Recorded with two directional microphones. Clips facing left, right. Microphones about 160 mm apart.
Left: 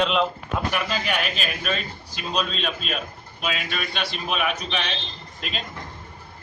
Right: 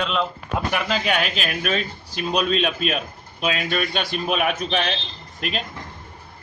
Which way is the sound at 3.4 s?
45° right (ahead or behind).